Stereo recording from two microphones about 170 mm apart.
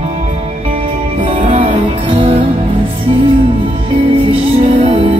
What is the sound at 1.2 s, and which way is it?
Music, 35° right (ahead or behind).